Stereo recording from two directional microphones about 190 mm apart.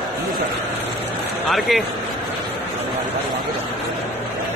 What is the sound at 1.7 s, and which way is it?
Speech, centre (ahead or behind).